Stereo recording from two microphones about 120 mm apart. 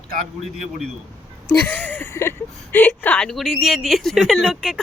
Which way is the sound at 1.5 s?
15° left (ahead or behind).